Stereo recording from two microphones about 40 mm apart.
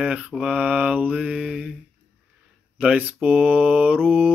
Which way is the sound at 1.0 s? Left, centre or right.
Right.